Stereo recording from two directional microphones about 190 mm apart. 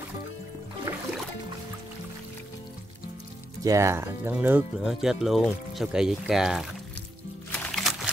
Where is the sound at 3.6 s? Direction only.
15° right (ahead or behind).